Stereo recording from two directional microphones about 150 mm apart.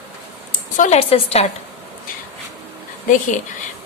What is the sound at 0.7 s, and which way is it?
Speech, 50° left (ahead or behind).